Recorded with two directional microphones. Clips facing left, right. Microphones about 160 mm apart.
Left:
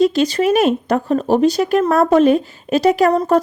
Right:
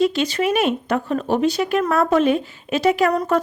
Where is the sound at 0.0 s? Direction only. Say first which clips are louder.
Left 5 dB; 40° left (ahead or behind).